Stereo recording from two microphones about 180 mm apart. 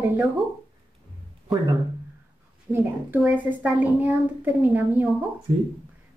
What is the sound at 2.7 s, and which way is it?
A child's voice, 10° right (ahead or behind).